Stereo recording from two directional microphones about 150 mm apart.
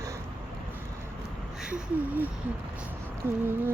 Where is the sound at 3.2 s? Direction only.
15° right (ahead or behind).